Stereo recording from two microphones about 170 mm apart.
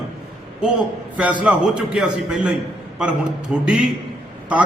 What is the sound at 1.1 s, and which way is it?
A man's voice, 5° right (ahead or behind).